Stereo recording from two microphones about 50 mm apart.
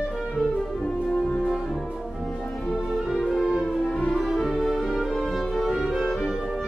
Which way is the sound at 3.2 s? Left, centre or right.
Centre.